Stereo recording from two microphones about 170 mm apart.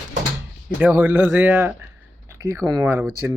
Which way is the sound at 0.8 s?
10° right (ahead or behind).